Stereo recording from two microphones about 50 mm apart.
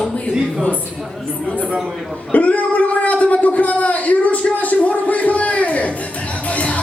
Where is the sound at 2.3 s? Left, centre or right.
Left.